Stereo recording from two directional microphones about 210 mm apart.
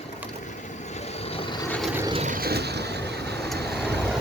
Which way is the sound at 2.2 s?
45° right (ahead or behind).